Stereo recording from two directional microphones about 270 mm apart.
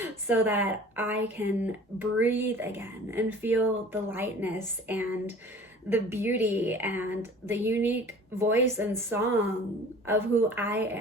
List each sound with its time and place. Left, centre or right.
0.0 s a woman's voice: centre